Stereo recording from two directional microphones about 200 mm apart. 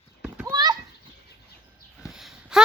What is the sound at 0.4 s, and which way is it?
Children playing, 20° right (ahead or behind).